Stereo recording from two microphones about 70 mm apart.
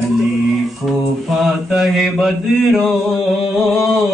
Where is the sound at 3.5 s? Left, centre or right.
Centre.